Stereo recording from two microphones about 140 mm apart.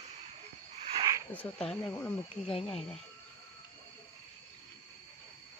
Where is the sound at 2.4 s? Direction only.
40° left (ahead or behind).